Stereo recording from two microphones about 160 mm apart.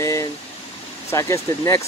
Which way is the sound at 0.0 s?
20° left (ahead or behind).